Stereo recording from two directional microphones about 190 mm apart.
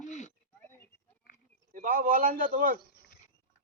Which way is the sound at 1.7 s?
45° right (ahead or behind).